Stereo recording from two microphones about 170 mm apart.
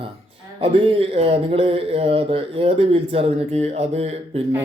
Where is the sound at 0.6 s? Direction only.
35° right (ahead or behind).